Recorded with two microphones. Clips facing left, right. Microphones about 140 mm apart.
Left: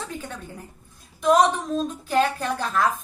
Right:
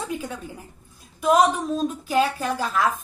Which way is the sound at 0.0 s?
10° right (ahead or behind).